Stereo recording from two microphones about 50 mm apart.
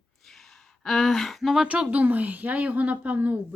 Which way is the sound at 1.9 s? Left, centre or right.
Right.